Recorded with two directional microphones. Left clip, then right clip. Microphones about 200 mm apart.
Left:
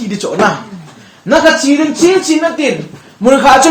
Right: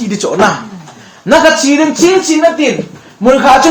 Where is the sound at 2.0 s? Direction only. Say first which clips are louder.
Right 2 dB; 25° left (ahead or behind).